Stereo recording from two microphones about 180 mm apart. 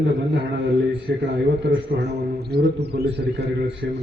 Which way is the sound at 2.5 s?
65° right (ahead or behind).